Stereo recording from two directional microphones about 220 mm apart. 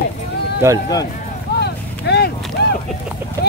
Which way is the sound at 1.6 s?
50° left (ahead or behind).